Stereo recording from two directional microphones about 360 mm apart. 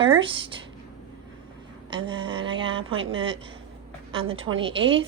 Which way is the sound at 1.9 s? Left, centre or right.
Centre.